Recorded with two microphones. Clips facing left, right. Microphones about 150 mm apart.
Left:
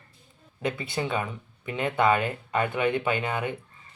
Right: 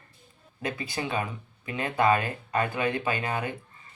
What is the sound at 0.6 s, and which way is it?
Speech, 25° left (ahead or behind).